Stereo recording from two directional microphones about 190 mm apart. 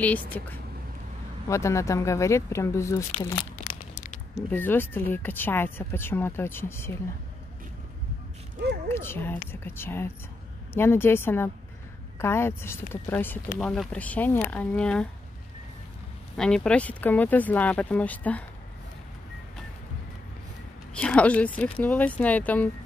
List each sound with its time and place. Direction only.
0.0 s speech: 10° left (ahead or behind)
4.5 s speech: 10° left (ahead or behind)
8.8 s speech: 10° left (ahead or behind)
16.3 s speech: 5° left (ahead or behind)
20.9 s speech: 5° left (ahead or behind)